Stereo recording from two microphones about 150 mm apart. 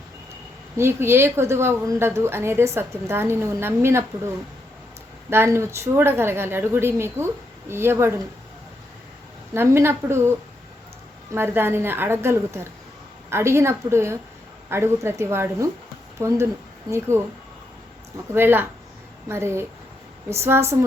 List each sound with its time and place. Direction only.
0.8 s a woman's voice: 15° right (ahead or behind)
5.3 s a woman's voice: 15° right (ahead or behind)
9.6 s a woman's voice: 15° right (ahead or behind)
18.3 s a woman's voice: 15° right (ahead or behind)